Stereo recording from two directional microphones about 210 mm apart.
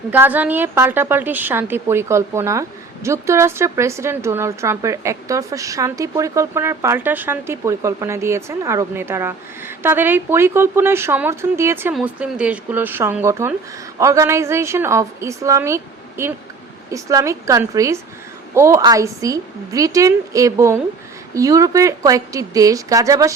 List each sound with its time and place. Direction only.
0.1 s a woman's voice: 10° right (ahead or behind)